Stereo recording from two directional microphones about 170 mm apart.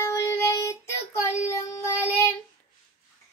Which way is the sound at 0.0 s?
15° left (ahead or behind).